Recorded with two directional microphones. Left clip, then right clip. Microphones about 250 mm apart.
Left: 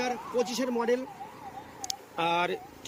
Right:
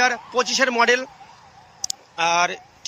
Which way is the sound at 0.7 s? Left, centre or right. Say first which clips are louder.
Right 11 dB; right.